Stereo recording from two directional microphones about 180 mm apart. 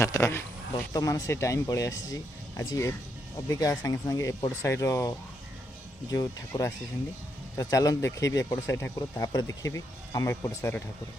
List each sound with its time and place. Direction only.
0.0 s speech: 15° left (ahead or behind)